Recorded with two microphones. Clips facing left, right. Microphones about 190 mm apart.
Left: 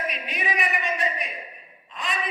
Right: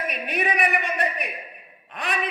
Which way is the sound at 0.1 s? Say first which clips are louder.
Right 4 dB; 60° right (ahead or behind).